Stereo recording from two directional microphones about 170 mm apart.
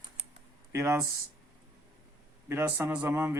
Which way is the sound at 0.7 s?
15° right (ahead or behind).